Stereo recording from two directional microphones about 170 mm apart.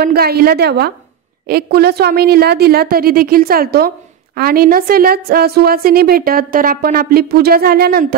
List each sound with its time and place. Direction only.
0.0 s a woman's voice: 65° right (ahead or behind)